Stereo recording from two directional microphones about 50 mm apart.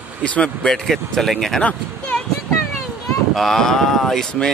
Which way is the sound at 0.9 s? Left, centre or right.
Centre.